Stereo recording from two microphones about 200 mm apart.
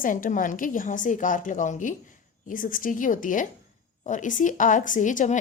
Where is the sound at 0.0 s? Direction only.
40° left (ahead or behind).